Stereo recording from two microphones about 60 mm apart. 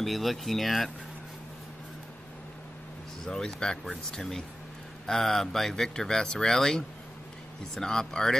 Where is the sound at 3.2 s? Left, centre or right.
Centre.